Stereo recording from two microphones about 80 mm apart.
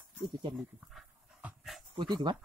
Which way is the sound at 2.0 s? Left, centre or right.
Right.